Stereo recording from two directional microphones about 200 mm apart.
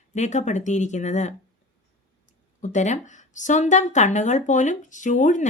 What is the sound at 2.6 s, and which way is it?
Speech, 35° left (ahead or behind).